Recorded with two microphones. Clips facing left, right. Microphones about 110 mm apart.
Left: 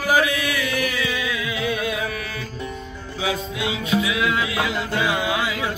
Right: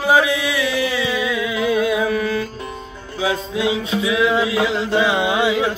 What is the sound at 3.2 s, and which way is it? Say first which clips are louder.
Music: right 5 dB; 30° right (ahead or behind).